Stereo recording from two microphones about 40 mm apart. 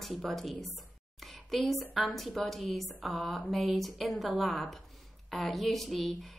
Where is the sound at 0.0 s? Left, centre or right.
Centre.